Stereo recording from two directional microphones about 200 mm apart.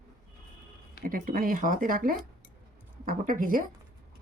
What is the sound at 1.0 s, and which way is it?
Speech, 45° right (ahead or behind).